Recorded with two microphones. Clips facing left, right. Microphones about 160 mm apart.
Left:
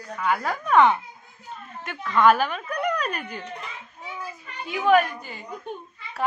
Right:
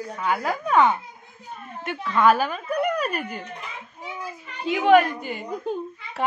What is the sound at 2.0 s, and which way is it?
A woman's voice, 5° right (ahead or behind).